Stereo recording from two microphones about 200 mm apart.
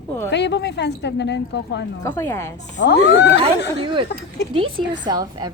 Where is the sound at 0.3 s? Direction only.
60° left (ahead or behind).